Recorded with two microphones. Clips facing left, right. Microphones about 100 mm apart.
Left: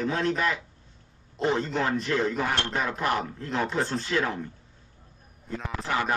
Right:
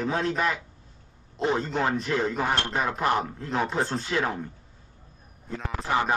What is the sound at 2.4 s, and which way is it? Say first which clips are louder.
Speech: right 2 dB; 20° right (ahead or behind).